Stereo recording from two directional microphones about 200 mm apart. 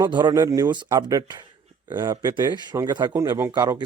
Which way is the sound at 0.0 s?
20° right (ahead or behind).